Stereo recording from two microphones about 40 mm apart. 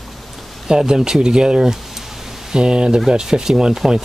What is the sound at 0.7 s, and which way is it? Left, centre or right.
Speech, centre.